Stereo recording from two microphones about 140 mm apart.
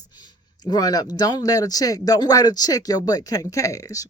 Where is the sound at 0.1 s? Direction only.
30° left (ahead or behind).